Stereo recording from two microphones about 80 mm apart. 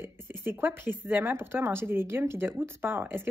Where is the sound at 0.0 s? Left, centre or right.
Right.